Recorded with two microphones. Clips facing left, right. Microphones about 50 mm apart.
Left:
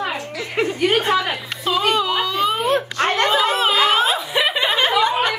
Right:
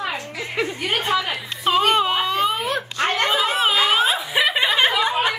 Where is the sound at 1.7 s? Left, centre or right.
Right.